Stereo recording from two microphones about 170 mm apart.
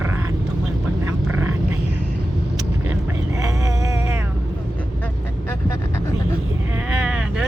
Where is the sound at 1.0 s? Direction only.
10° right (ahead or behind).